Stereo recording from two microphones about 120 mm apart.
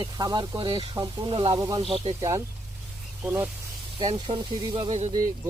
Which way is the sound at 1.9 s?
55° right (ahead or behind).